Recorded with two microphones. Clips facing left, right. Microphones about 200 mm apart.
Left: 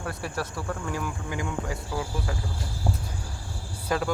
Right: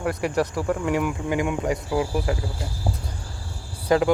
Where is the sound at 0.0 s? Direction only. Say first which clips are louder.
Right 9 dB; 15° right (ahead or behind).